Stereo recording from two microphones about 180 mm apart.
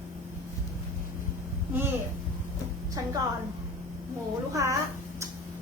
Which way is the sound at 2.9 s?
20° right (ahead or behind).